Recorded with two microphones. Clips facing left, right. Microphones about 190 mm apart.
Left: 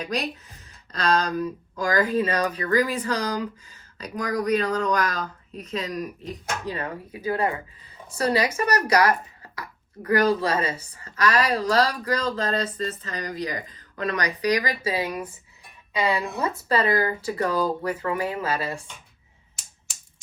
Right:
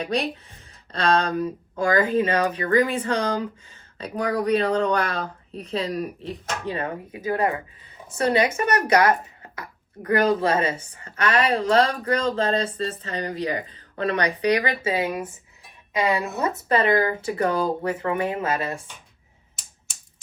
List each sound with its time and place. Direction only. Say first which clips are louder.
0.0 s speech: right 3 dB; 30° right (ahead or behind)
16.7 s speech: right 2 dB; 25° right (ahead or behind)